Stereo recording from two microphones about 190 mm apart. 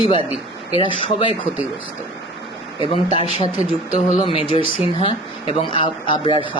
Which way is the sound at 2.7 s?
25° left (ahead or behind).